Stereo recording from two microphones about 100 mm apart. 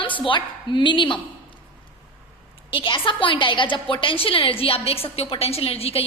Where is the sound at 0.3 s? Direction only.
55° left (ahead or behind).